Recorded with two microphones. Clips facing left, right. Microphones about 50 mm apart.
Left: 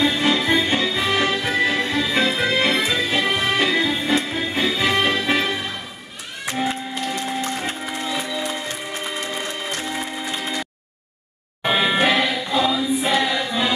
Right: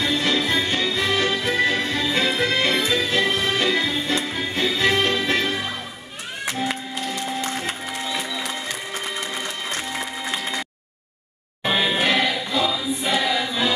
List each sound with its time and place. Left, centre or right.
0.0 s music: centre
7.8 s music: centre
11.6 s music: centre
12.4 s choir: centre